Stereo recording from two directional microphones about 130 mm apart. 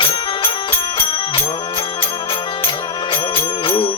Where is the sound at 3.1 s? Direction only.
40° left (ahead or behind).